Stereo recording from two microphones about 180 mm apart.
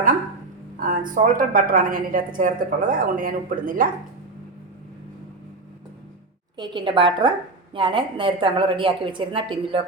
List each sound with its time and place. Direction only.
0.8 s a woman's voice: 50° right (ahead or behind)
6.6 s a woman's voice: 25° right (ahead or behind)